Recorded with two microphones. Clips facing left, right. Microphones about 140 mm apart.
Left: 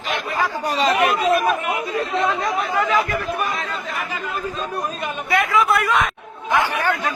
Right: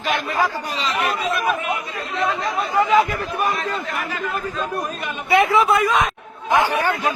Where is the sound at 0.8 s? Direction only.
50° left (ahead or behind).